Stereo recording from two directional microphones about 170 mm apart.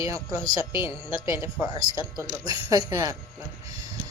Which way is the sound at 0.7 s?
30° left (ahead or behind).